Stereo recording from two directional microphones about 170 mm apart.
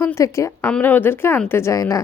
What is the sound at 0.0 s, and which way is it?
A woman's voice, 15° left (ahead or behind).